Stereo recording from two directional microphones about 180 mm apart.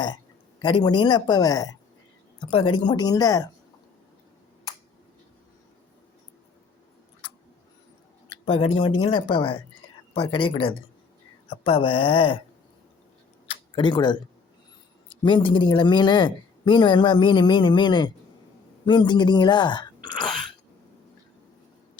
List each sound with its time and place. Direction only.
0.6 s speech: 25° left (ahead or behind)
8.4 s speech: 30° left (ahead or behind)
13.7 s speech: 25° left (ahead or behind)
15.2 s speech: 25° left (ahead or behind)
20.1 s throat clearing: 25° left (ahead or behind)